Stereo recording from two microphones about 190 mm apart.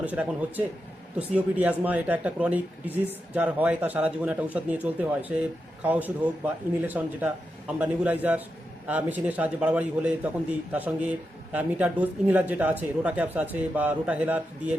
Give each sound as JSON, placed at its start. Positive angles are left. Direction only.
{"t": 0.0, "sound": "speech", "side_deg": -10}